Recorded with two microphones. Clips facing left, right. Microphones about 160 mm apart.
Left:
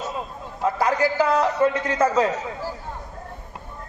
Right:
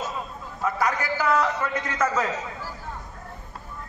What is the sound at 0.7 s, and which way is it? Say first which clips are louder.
A man's voice: left 5 dB; 30° left (ahead or behind).